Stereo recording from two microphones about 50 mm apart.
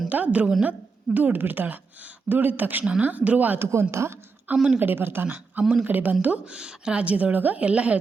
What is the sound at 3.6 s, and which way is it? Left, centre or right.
Speech, right.